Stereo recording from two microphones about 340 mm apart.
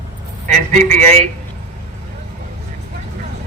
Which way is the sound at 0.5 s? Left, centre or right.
Right.